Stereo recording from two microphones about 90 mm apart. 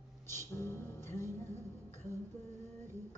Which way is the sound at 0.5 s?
30° left (ahead or behind).